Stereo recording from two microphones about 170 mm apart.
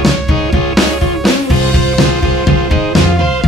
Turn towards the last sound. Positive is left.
turn(degrees=0)  # may be behind; listen again after turning